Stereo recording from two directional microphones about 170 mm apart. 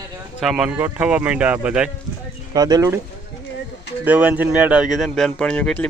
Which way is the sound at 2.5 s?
20° right (ahead or behind).